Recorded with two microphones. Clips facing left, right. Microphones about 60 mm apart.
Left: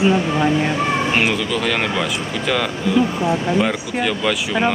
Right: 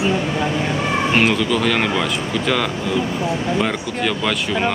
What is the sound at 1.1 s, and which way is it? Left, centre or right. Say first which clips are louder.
Speech: right 2 dB; centre.